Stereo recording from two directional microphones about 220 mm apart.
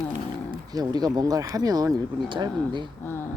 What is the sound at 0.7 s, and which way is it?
Speech, 15° right (ahead or behind).